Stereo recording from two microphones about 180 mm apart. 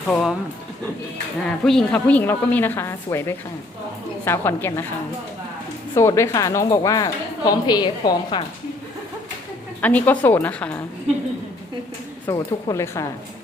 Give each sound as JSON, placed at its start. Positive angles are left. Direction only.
{"t": 0.1, "sound": "speech", "side_deg": 0}
{"t": 1.6, "sound": "a woman's voice", "side_deg": 5}
{"t": 5.9, "sound": "a woman's voice", "side_deg": 15}
{"t": 9.8, "sound": "a woman's voice", "side_deg": 10}
{"t": 12.2, "sound": "a woman's voice", "side_deg": 20}